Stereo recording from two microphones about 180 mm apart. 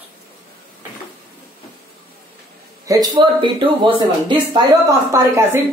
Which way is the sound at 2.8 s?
25° right (ahead or behind).